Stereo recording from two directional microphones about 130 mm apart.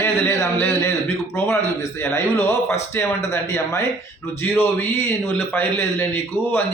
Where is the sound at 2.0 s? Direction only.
20° left (ahead or behind).